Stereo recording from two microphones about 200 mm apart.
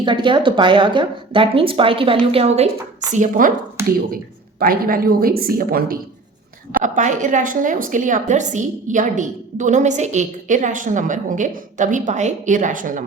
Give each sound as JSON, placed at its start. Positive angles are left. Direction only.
{"t": 0.0, "sound": "a woman's voice", "side_deg": -25}
{"t": 4.6, "sound": "a woman's voice", "side_deg": -45}